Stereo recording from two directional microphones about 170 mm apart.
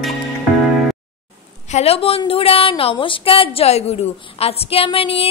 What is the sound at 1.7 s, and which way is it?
A woman's voice, 35° left (ahead or behind).